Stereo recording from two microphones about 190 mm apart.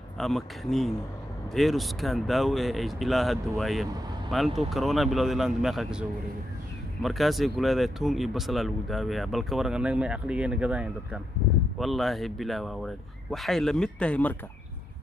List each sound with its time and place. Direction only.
0.2 s speech: centre (ahead or behind)